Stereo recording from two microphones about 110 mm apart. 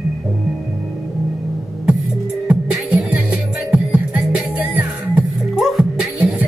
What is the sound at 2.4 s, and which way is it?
Music, 5° right (ahead or behind).